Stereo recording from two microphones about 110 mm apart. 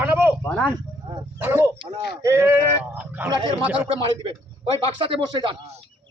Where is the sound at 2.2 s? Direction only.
25° right (ahead or behind).